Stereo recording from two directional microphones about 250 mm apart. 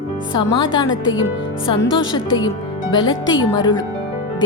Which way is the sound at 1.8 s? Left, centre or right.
Left.